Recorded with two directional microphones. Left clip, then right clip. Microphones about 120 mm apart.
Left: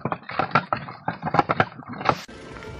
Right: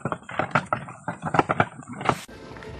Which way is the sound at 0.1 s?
25° left (ahead or behind).